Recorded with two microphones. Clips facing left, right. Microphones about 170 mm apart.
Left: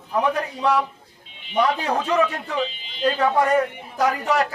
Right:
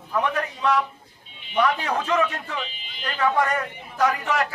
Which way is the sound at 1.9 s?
30° left (ahead or behind).